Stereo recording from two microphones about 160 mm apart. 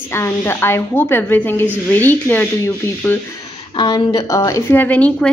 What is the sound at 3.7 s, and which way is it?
Speech, 30° left (ahead or behind).